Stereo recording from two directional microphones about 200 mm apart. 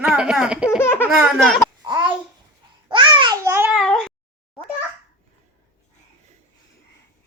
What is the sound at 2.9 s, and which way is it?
Babbling, 25° right (ahead or behind).